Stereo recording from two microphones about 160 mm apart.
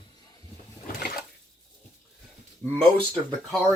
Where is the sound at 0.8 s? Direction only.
65° left (ahead or behind).